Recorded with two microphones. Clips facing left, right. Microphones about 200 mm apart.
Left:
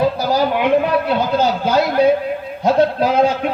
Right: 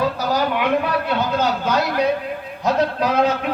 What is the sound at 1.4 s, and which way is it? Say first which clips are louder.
Speech: left 4 dB; 30° left (ahead or behind).